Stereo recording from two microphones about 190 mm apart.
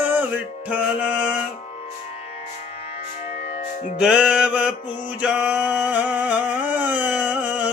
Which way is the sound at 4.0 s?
5° right (ahead or behind).